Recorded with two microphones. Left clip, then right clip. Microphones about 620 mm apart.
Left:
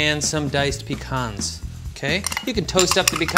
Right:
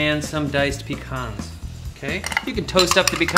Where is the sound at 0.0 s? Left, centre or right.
Right.